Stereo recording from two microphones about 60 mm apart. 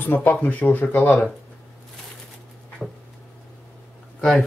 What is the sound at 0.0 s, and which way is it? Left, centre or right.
Speech, left.